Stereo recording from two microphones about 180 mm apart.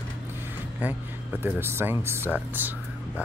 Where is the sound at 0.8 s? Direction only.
10° right (ahead or behind).